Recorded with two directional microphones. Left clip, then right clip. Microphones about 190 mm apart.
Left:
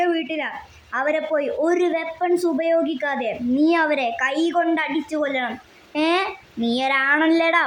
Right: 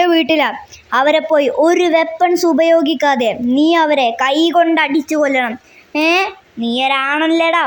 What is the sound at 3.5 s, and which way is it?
A woman's voice, 20° right (ahead or behind).